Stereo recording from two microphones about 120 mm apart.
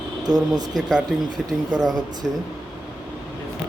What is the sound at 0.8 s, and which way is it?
Speech, 5° right (ahead or behind).